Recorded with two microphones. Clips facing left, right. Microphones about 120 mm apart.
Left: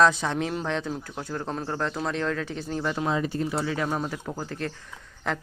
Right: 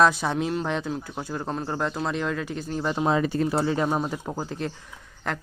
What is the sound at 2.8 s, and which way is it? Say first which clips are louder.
Speech: right 3 dB; 25° right (ahead or behind).